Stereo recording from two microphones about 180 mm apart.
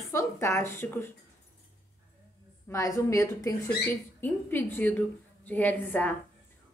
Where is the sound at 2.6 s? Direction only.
15° left (ahead or behind).